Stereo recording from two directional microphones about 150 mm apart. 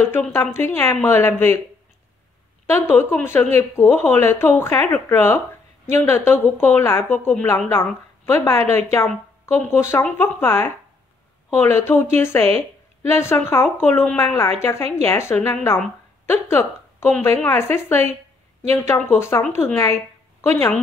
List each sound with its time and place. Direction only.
0.0 s speech: 15° left (ahead or behind)
2.6 s a woman's voice: 15° left (ahead or behind)